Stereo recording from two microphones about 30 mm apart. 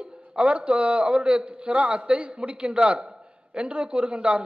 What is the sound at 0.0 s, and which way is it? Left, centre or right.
A man's voice, right.